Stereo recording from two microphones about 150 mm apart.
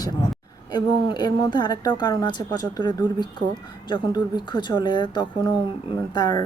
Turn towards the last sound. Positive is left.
turn(degrees=25)  # may be behind; listen again after turning